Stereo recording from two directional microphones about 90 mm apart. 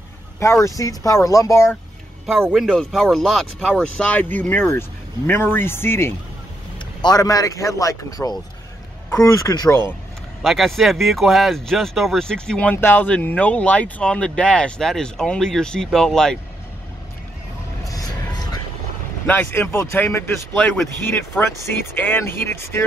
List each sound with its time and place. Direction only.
0.4 s speech: 35° left (ahead or behind)
2.5 s speech: 5° left (ahead or behind); by 6.1 s 25° left (ahead or behind)
7.0 s speech: 45° left (ahead or behind)
9.5 s speech: 40° left (ahead or behind)
10.4 s speech: centre (ahead or behind)
12.7 s speech: 25° left (ahead or behind); by 16.3 s 5° left (ahead or behind)
17.8 s a sound: 45° left (ahead or behind)
19.2 s speech: 20° left (ahead or behind)